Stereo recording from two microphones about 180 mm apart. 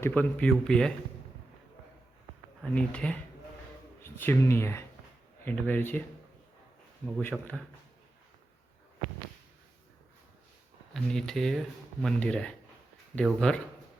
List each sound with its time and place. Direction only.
0.0 s speech: 10° left (ahead or behind)
2.7 s speech: 5° left (ahead or behind)
7.2 s speech: 10° left (ahead or behind)
10.9 s speech: centre (ahead or behind)